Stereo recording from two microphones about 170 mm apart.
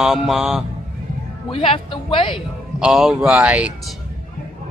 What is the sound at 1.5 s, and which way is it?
Speech, 30° left (ahead or behind).